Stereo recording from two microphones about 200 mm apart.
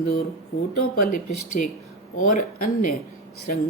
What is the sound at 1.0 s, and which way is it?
Speech, 40° left (ahead or behind).